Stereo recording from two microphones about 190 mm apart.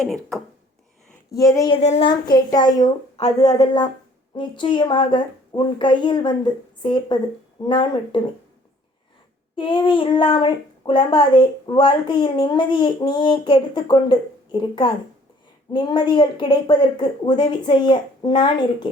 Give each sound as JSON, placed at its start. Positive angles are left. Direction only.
{"t": 0.0, "sound": "speech", "side_deg": 0}
{"t": 1.4, "sound": "speech", "side_deg": 15}
{"t": 1.7, "sound": "a child's voice", "side_deg": 30}
{"t": 9.6, "sound": "a child's voice", "side_deg": 25}